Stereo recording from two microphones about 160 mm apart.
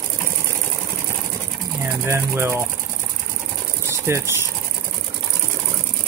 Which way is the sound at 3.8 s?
15° right (ahead or behind).